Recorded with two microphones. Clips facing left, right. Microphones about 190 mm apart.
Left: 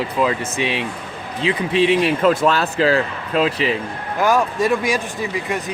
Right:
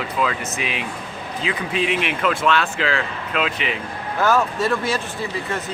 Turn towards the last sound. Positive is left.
turn(degrees=15)  # may be behind; listen again after turning